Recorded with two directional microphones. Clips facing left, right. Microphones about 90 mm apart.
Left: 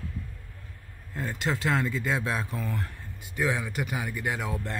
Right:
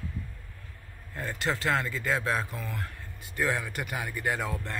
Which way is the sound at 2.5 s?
30° left (ahead or behind).